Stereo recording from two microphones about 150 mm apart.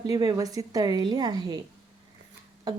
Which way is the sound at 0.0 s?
30° right (ahead or behind).